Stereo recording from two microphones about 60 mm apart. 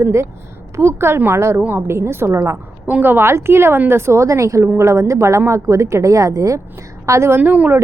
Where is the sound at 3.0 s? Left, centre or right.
Right.